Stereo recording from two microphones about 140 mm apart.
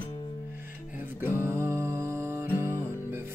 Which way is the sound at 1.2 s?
15° right (ahead or behind).